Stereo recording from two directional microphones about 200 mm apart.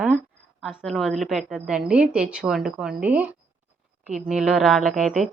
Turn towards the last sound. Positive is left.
turn(degrees=0)  # may be behind; listen again after turning